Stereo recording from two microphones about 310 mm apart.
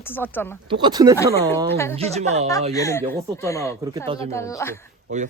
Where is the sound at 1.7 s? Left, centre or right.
Centre.